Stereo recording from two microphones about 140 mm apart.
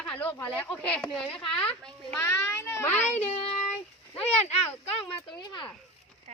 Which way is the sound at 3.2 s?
45° left (ahead or behind).